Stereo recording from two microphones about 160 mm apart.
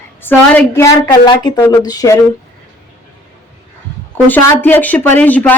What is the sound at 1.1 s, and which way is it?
Speech, 25° left (ahead or behind).